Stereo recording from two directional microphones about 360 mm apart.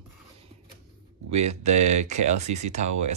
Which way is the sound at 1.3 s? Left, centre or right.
Centre.